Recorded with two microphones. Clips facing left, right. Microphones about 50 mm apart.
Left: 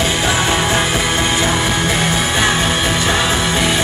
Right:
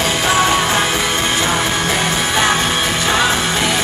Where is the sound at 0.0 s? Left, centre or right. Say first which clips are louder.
Right 1 dB; left.